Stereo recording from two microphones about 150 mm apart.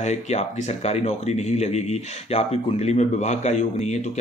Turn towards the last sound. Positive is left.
turn(degrees=50)  # may be behind; listen again after turning